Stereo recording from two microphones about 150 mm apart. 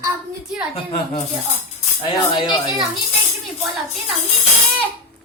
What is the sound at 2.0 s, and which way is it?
Speech, 30° left (ahead or behind).